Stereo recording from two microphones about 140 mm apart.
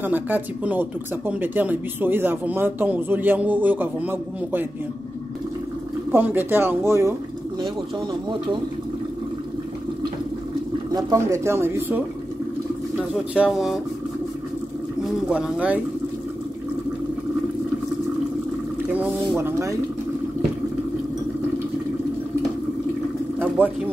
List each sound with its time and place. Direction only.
0.0 s speech: 10° right (ahead or behind)
6.1 s speech: 15° right (ahead or behind)
7.6 s speech: 35° right (ahead or behind)
10.9 s speech: 25° right (ahead or behind); by 13.7 s 5° right (ahead or behind)
15.0 s speech: 5° right (ahead or behind)
18.9 s speech: 10° right (ahead or behind)
23.6 s speech: 15° right (ahead or behind)